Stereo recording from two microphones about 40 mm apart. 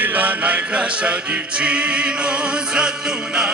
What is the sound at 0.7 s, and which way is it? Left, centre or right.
Music, right.